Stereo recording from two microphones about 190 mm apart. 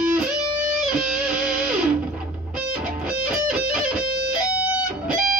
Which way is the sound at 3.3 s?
5° right (ahead or behind).